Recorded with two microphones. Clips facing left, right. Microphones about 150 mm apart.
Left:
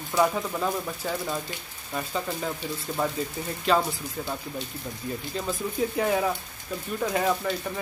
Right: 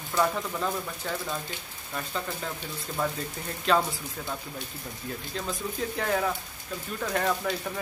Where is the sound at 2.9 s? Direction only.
25° left (ahead or behind).